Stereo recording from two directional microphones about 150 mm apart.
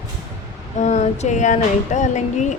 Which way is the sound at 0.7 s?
50° left (ahead or behind).